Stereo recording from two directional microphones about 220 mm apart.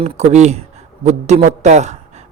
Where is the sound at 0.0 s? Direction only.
30° right (ahead or behind).